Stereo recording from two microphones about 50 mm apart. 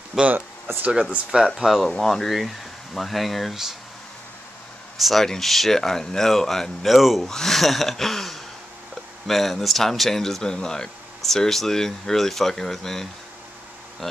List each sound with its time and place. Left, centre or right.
0.2 s speech: centre
0.7 s speech: right
1.3 s speech: centre
1.9 s speech: centre
4.9 s speech: centre
7.2 s speech: centre